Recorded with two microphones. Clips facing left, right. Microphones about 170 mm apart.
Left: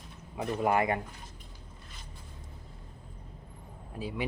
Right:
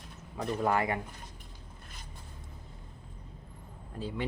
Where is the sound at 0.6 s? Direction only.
20° left (ahead or behind).